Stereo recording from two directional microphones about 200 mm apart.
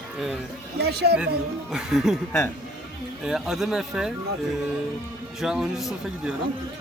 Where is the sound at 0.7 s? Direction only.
55° right (ahead or behind).